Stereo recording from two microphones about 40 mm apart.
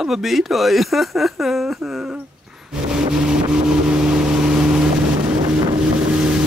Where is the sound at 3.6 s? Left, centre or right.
Right.